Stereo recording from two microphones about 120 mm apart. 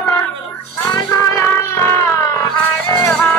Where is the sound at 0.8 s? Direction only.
30° left (ahead or behind).